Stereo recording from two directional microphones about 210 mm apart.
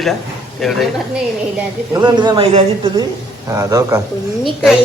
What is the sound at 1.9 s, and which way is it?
Speech, 20° right (ahead or behind).